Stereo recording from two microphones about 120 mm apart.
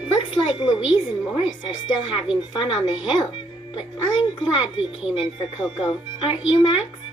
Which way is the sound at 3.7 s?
45° left (ahead or behind).